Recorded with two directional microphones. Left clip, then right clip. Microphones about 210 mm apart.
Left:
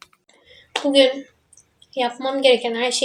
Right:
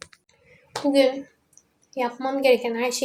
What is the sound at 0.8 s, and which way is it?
A woman's voice, 5° left (ahead or behind).